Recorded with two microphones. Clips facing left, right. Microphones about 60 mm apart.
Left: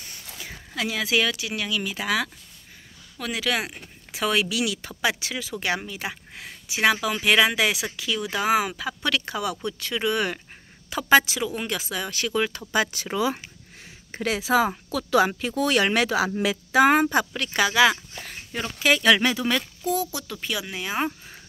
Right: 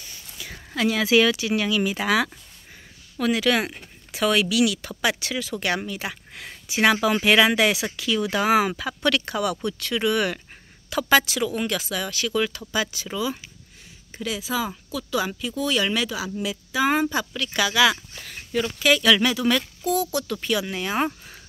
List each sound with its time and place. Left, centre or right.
0.5 s speech: centre
6.4 s speech: centre; by 12.6 s left
12.7 s speech: left
14.1 s speech: left
17.1 s speech: left; by 21.4 s centre